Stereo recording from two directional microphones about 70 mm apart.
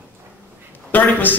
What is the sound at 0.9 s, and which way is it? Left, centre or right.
Speech, left.